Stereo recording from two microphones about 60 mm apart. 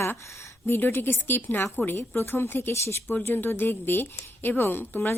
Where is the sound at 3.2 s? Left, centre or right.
Left.